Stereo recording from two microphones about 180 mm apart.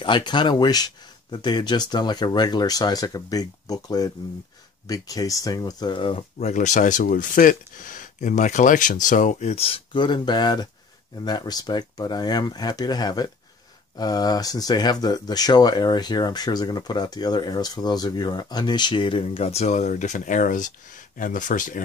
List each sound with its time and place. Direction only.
0.0 s speech: 25° left (ahead or behind); by 21.8 s 45° left (ahead or behind)